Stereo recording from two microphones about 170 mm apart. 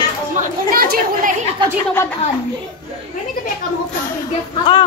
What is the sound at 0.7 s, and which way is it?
Chatter, 60° right (ahead or behind).